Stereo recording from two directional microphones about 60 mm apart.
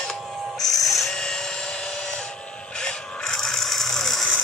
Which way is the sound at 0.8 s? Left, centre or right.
Centre.